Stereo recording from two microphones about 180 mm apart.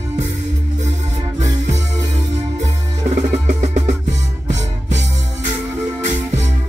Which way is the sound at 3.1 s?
40° right (ahead or behind).